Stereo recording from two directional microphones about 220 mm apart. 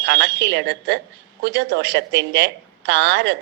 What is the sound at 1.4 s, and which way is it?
A woman's voice, 50° right (ahead or behind).